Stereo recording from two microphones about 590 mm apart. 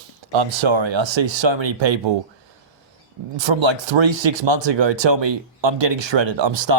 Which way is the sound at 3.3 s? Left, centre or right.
Right.